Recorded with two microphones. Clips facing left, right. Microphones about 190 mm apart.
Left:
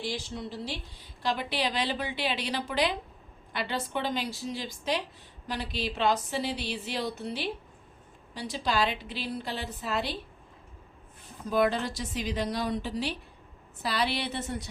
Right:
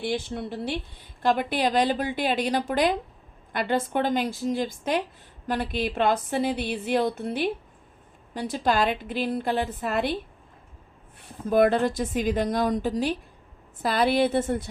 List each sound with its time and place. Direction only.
0.0 s speech: 60° right (ahead or behind)
11.2 s speech: 50° right (ahead or behind)